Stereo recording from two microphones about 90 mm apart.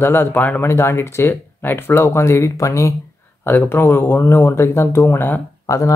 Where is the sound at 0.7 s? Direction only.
30° left (ahead or behind).